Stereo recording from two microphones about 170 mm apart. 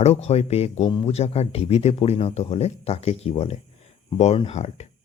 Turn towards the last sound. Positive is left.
turn(degrees=40)  # may be behind; listen again after turning